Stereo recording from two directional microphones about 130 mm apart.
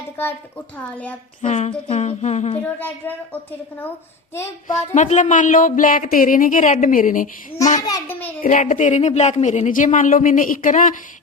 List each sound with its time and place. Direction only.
0.8 s a woman's voice: 10° left (ahead or behind)
1.4 s humming: 65° left (ahead or behind)
2.7 s a woman's voice: 15° left (ahead or behind)
5.0 s speech: 70° left (ahead or behind)
7.8 s a child's voice: 30° left (ahead or behind)
8.4 s speech: 80° left